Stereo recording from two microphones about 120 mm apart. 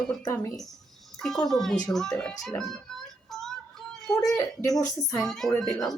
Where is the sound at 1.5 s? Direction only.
5° left (ahead or behind).